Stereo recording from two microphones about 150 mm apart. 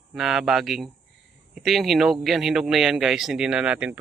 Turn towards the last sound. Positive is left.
turn(degrees=-5)  # may be behind; listen again after turning